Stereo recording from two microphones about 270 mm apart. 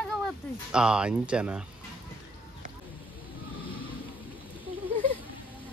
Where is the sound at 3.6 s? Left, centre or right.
Centre.